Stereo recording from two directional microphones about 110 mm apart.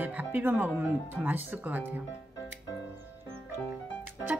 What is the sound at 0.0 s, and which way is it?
A woman's voice, 15° right (ahead or behind).